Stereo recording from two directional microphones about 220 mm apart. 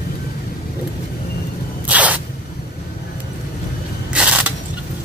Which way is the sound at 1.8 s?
5° right (ahead or behind).